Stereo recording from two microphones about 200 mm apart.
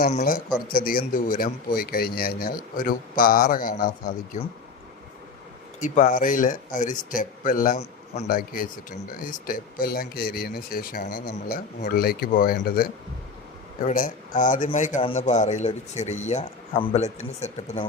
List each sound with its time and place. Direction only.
0.0 s speech: 40° left (ahead or behind)
5.8 s speech: 40° left (ahead or behind)